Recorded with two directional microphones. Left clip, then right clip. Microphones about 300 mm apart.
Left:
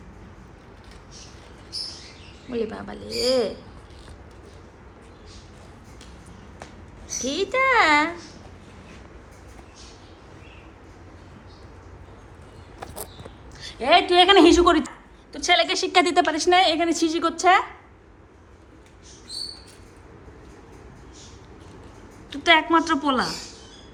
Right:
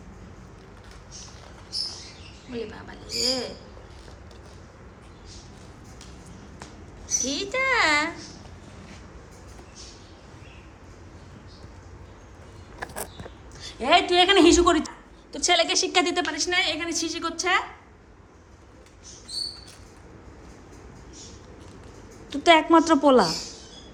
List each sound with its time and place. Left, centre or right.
2.5 s a woman's voice: centre
7.2 s a woman's voice: centre
13.6 s a sound: right
13.8 s a woman's voice: centre
15.3 s a woman's voice: centre
22.3 s a woman's voice: centre